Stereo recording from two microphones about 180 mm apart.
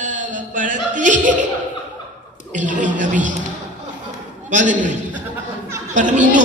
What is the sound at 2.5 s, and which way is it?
Music, 45° right (ahead or behind).